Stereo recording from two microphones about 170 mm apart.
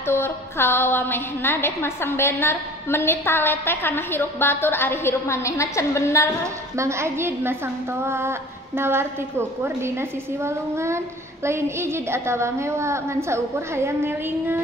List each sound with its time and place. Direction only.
0.0 s a woman's voice: 15° left (ahead or behind)
6.4 s a woman's voice: 15° right (ahead or behind)